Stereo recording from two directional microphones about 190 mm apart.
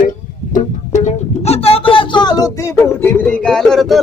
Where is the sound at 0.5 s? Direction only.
40° left (ahead or behind).